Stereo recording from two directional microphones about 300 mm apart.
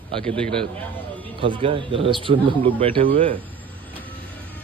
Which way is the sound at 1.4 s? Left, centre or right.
Centre.